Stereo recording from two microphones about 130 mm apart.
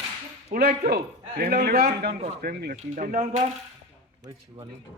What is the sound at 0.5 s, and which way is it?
Speech, 90° right.